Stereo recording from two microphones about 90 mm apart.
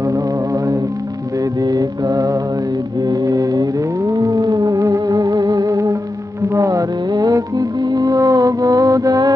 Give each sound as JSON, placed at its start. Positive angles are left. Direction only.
{"t": 1.6, "sound": "mantra", "side_deg": -45}
{"t": 3.0, "sound": "music", "side_deg": -45}